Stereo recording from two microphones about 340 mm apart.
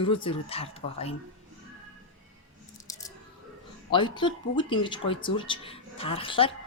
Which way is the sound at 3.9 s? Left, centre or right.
Centre.